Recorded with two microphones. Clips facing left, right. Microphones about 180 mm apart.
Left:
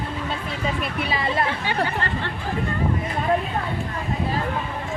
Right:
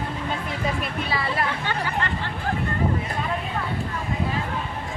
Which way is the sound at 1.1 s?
15° left (ahead or behind).